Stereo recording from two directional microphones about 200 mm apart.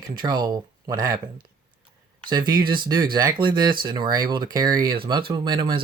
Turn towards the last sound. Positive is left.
turn(degrees=-25)  # may be behind; listen again after turning